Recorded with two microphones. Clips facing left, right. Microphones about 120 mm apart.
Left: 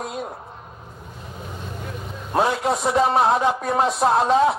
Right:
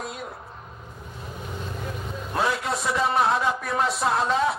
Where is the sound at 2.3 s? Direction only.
30° left (ahead or behind).